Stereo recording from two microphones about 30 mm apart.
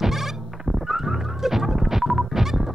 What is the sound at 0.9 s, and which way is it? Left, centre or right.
Fowl, centre.